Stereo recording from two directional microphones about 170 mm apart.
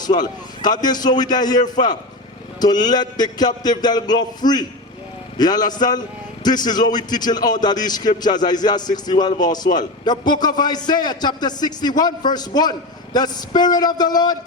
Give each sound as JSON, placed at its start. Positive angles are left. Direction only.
{"t": 0.0, "sound": "a man's voice", "side_deg": 25}